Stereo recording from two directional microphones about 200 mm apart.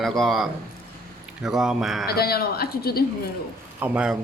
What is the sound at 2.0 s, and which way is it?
A woman's voice, 50° left (ahead or behind).